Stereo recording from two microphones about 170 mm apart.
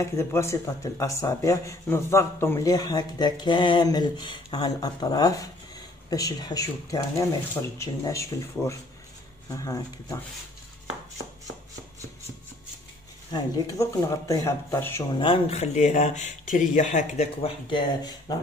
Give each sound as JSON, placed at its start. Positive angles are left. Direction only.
{"t": 0.0, "sound": "speech", "side_deg": 15}
{"t": 13.3, "sound": "speech", "side_deg": 20}
{"t": 15.1, "sound": "speech", "side_deg": 30}
{"t": 17.4, "sound": "speech", "side_deg": 30}